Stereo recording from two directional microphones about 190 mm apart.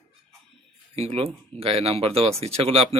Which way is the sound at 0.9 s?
30° right (ahead or behind).